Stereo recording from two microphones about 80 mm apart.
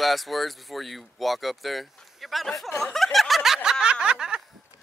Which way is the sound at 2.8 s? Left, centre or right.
Centre.